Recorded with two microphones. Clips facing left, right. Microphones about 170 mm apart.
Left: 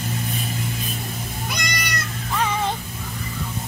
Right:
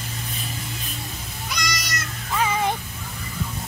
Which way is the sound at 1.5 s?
55° left (ahead or behind).